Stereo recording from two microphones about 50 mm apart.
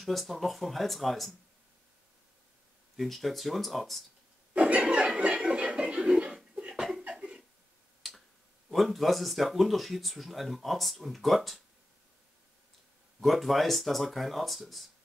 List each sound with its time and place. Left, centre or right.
0.0 s speech: centre
3.0 s speech: centre
4.6 s chuckle: right
6.7 s a sound: centre
7.1 s cough: centre
8.0 s finger snapping: centre
8.6 s speech: centre
13.2 s speech: centre